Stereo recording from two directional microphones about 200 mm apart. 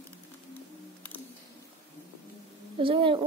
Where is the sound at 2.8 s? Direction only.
25° right (ahead or behind).